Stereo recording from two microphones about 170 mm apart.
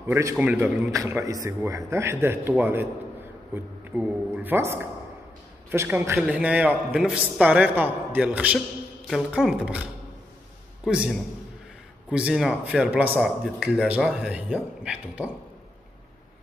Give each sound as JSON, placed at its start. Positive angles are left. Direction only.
{"t": 0.0, "sound": "a man's voice", "side_deg": -15}
{"t": 10.9, "sound": "a man's voice", "side_deg": -5}